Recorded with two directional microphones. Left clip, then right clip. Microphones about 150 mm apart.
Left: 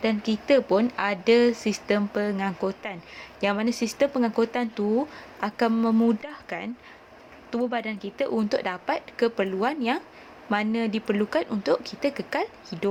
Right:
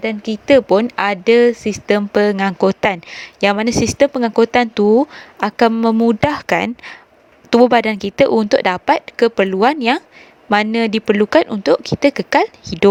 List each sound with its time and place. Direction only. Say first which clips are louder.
0.0 s speech: right 5 dB; 50° right (ahead or behind)
5.7 s speech: right 9 dB; 50° right (ahead or behind)
6.1 s a woman's voice: right 19 dB; 90° right; by 12.9 s 70° right (ahead or behind)